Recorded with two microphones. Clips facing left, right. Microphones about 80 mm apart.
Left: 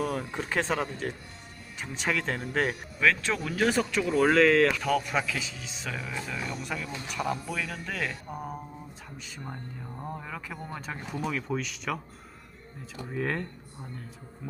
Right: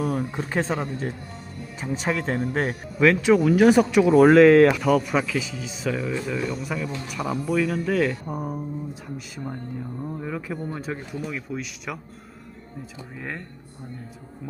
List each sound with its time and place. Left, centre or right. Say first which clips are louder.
0.0 s speech: right 5 dB; centre
0.3 s speech: right 3 dB; centre
4.8 s speech: right 6 dB; centre
13.1 s speech: left 4 dB; centre